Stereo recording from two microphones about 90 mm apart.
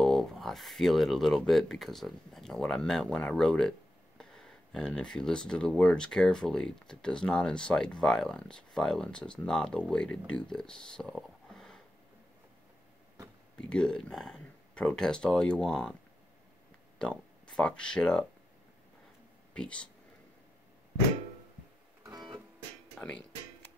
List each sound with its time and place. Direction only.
0.0 s speech: 5° left (ahead or behind)
13.6 s speech: 10° left (ahead or behind)
17.0 s speech: 10° left (ahead or behind)
19.5 s speech: 10° left (ahead or behind)
22.0 s music: 45° right (ahead or behind)
22.9 s speech: 15° left (ahead or behind)